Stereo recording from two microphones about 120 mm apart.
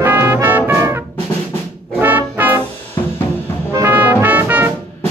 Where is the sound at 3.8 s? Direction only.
15° right (ahead or behind).